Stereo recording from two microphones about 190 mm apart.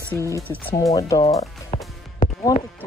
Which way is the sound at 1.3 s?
35° left (ahead or behind).